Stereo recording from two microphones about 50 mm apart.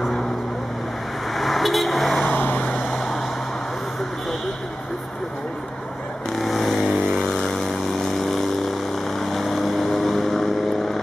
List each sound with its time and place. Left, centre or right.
1.3 s vehicle: centre
2.2 s vehicle: left
6.3 s vehicle: centre
6.9 s vehicle: centre
7.3 s vehicle: centre